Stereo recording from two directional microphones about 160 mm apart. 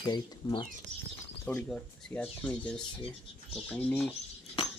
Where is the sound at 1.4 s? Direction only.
10° left (ahead or behind).